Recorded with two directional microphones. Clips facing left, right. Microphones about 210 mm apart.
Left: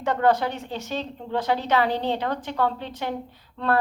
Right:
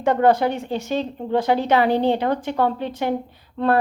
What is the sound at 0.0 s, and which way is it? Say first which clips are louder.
A woman's voice: right 5 dB; 10° right (ahead or behind).